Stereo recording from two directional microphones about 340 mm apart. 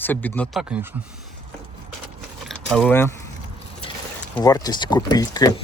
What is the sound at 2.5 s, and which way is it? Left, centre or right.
Keys jangling, centre.